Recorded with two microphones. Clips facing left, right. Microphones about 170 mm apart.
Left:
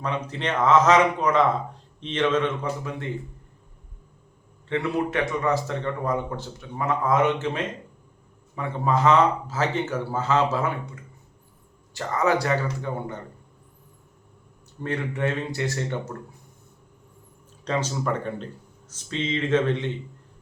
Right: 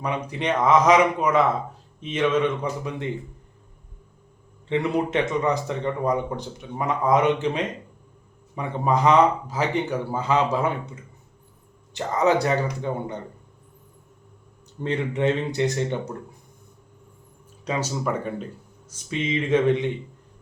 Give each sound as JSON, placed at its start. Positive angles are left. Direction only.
{"t": 0.0, "sound": "speech", "side_deg": -15}
{"t": 4.7, "sound": "speech", "side_deg": -20}
{"t": 11.9, "sound": "speech", "side_deg": -20}
{"t": 14.8, "sound": "speech", "side_deg": -20}
{"t": 17.7, "sound": "speech", "side_deg": -10}